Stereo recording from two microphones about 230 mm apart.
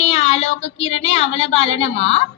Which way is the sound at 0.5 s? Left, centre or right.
Left.